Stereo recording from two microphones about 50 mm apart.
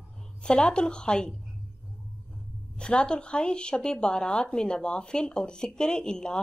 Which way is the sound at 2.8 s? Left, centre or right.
Centre.